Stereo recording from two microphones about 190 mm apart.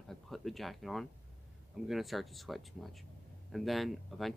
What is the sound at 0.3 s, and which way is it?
Speech, centre (ahead or behind).